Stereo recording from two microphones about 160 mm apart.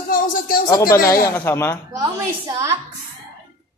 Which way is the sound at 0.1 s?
60° left (ahead or behind).